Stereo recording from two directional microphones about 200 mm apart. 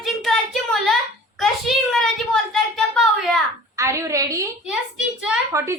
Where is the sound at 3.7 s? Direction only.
15° right (ahead or behind).